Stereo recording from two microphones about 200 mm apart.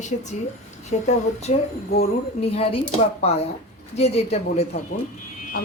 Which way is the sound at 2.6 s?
30° left (ahead or behind).